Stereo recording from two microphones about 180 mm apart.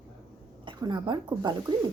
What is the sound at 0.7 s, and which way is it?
A woman's voice, 25° right (ahead or behind).